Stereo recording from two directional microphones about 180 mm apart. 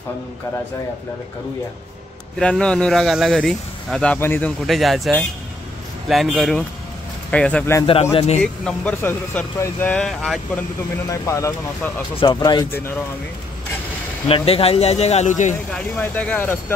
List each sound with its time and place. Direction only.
2.3 s speech: 5° left (ahead or behind)
7.8 s speech: 30° left (ahead or behind)
8.4 s speech: 5° left (ahead or behind)
11.1 s speech: 15° left (ahead or behind)
14.2 s speech: 30° left (ahead or behind)
15.7 s speech: 5° left (ahead or behind)